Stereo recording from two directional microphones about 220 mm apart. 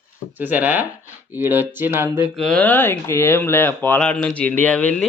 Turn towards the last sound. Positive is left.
turn(degrees=5)  # may be behind; listen again after turning